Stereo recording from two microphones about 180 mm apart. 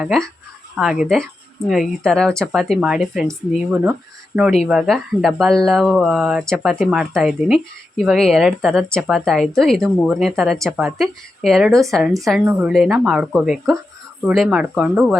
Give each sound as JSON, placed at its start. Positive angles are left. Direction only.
{"t": 0.0, "sound": "speech", "side_deg": 0}